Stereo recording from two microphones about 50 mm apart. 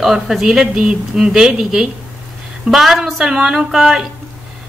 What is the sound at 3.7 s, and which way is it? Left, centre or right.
Speech, centre.